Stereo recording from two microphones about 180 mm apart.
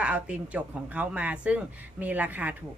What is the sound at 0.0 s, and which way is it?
A woman's voice, 5° right (ahead or behind).